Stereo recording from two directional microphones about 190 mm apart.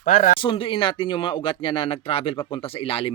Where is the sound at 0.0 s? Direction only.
40° left (ahead or behind).